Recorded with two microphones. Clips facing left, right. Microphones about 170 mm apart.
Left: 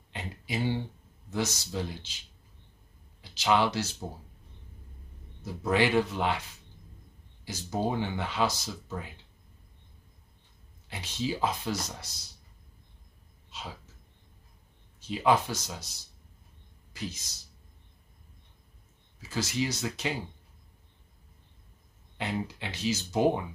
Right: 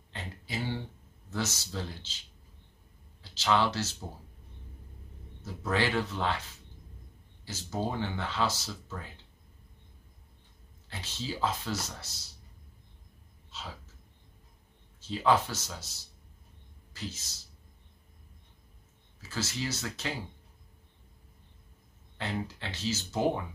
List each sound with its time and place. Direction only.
0.1 s a sound: 15° left (ahead or behind)
1.3 s speech: 15° left (ahead or behind)
3.2 s speech: 15° left (ahead or behind)
5.4 s speech: 15° left (ahead or behind)
7.4 s speech: 15° left (ahead or behind)
10.9 s speech: 15° left (ahead or behind)
13.5 s a sound: 15° left (ahead or behind)
15.0 s speech: 15° left (ahead or behind)
16.9 s speech: 15° left (ahead or behind)
19.2 s speech: 15° left (ahead or behind)
22.1 s speech: 15° left (ahead or behind)